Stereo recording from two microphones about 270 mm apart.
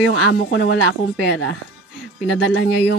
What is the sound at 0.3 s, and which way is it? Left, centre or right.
A woman's voice, left.